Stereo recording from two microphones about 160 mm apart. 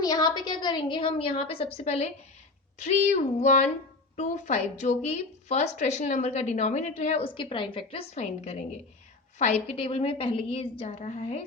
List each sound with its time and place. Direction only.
0.0 s a woman's voice: 25° left (ahead or behind); by 11.4 s 45° left (ahead or behind)